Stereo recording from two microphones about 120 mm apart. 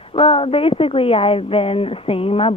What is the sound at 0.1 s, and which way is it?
Speech, 50° left (ahead or behind).